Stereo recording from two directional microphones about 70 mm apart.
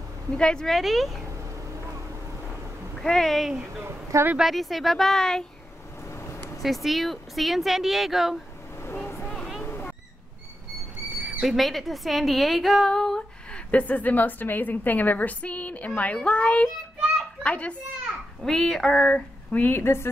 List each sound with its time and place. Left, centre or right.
0.3 s a woman's voice: centre
0.7 s speech: centre
3.0 s speech: centre
3.8 s speech: right
4.4 s speech: centre
6.0 s a sound: left
6.6 s speech: centre
9.0 s a sound: left
9.3 s a sound: centre
11.4 s a woman's voice: centre
18.4 s a woman's voice: centre; by 20.1 s left